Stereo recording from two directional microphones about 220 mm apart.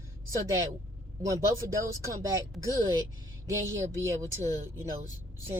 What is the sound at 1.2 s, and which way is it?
Speech, 15° right (ahead or behind).